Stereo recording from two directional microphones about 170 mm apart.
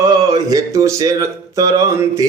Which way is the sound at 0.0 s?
20° right (ahead or behind).